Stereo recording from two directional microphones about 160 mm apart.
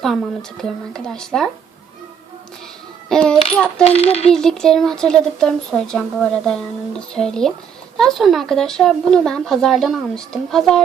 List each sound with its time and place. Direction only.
0.0 s speech: centre (ahead or behind)
3.1 s coin: 5° left (ahead or behind)
3.8 s speech: 40° left (ahead or behind)
4.3 s speech: 5° left (ahead or behind)